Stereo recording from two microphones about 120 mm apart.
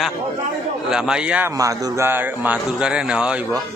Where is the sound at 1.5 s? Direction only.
30° right (ahead or behind).